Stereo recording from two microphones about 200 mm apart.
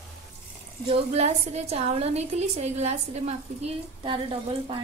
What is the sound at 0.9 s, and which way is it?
A woman's voice, 30° right (ahead or behind).